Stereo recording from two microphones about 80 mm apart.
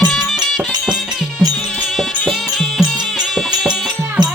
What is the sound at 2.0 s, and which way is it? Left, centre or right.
Music, centre.